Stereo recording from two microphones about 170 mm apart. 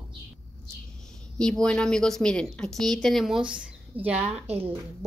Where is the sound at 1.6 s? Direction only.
5° left (ahead or behind).